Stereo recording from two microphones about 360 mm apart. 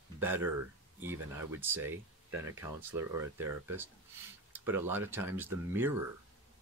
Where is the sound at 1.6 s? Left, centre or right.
Centre.